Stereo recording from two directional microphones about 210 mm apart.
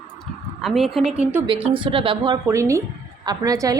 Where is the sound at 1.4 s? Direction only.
25° right (ahead or behind).